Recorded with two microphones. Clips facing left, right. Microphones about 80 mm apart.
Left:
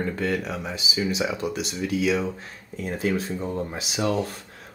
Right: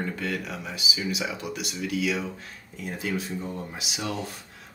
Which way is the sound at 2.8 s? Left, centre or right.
Left.